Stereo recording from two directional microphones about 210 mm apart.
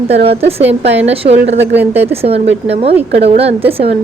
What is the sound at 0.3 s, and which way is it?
A woman's voice, 30° right (ahead or behind).